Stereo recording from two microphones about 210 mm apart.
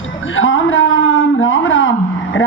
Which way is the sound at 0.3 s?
70° left (ahead or behind).